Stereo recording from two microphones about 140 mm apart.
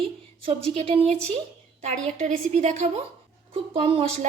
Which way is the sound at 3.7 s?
40° right (ahead or behind).